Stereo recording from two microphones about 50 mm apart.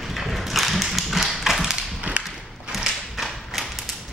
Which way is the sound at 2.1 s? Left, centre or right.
Right.